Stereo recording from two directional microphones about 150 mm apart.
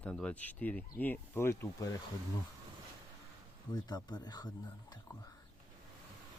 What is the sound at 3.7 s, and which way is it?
Speech, 30° left (ahead or behind).